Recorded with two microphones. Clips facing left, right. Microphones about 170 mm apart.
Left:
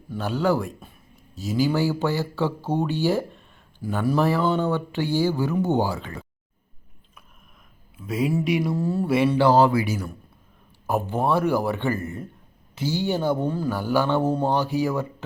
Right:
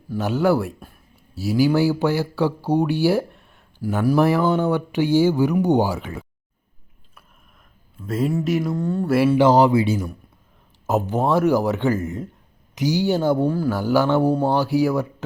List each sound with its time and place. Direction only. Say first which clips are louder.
0.2 s speech: right 4 dB; 10° right (ahead or behind)
7.9 s speech: right 1 dB; centre (ahead or behind)
9.4 s speech: right 2 dB; 20° right (ahead or behind)
11.1 s speech: right 4 dB; 20° right (ahead or behind)
13.1 s speech: right 3 dB; 15° left (ahead or behind)
13.3 s speech: right 4 dB; 10° right (ahead or behind)